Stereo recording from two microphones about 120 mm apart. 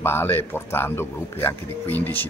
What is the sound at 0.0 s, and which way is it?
Speech, 20° left (ahead or behind).